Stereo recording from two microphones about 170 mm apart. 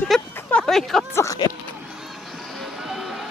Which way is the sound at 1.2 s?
20° left (ahead or behind).